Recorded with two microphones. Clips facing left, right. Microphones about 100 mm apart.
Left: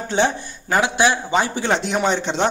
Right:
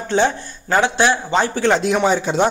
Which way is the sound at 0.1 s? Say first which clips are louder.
Right 2 dB; 15° left (ahead or behind).